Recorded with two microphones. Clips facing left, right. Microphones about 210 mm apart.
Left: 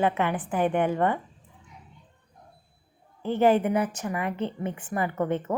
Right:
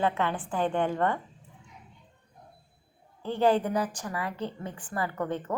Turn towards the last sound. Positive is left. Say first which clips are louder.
# left 4 dB
turn(degrees=20)  # may be behind; listen again after turning